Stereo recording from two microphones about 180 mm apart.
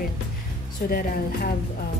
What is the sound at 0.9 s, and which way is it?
Speech, 55° left (ahead or behind).